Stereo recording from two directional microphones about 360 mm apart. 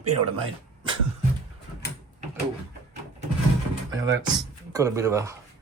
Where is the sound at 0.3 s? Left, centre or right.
Centre.